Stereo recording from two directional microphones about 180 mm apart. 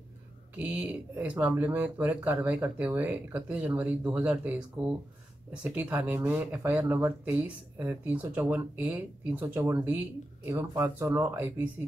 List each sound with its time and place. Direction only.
0.6 s speech: 10° right (ahead or behind)